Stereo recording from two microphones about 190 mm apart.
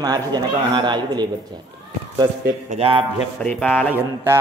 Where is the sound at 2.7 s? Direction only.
30° right (ahead or behind).